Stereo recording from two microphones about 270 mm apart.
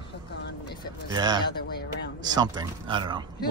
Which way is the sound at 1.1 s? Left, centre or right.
Centre.